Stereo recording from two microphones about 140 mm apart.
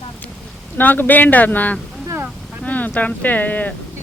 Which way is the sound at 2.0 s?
15° right (ahead or behind).